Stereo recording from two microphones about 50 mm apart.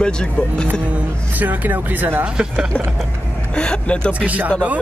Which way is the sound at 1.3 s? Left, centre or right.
Right.